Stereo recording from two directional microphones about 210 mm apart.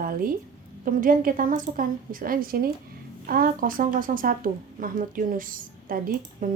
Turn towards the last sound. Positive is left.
turn(degrees=-40)  # may be behind; listen again after turning